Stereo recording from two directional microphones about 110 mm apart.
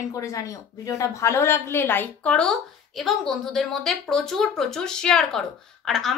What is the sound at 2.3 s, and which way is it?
A woman's voice, 5° left (ahead or behind).